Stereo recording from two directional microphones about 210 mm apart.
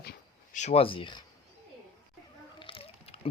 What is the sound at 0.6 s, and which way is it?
Speech, 30° left (ahead or behind).